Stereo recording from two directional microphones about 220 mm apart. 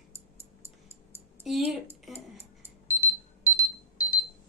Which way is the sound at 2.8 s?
10° left (ahead or behind).